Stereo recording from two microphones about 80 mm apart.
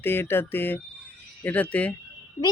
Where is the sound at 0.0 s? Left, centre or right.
Left.